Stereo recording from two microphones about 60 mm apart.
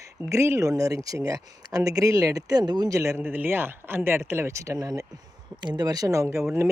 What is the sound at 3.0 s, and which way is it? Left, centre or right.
Speech, right.